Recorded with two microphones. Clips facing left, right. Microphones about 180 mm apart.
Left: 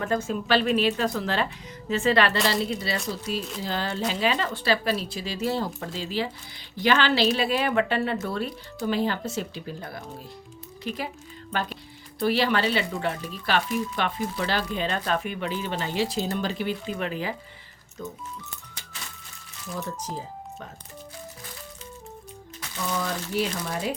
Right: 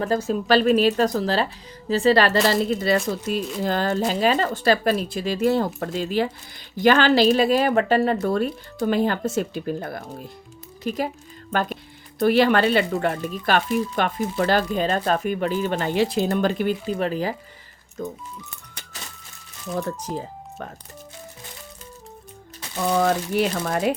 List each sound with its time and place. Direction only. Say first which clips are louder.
0.0 s speech: right 4 dB; 35° right (ahead or behind); by 10.0 s 55° right (ahead or behind)
10.8 s speech: right 7 dB; 45° right (ahead or behind)
17.0 s speech: right 6 dB; 40° right (ahead or behind)
22.9 s speech: right 9 dB; 60° right (ahead or behind)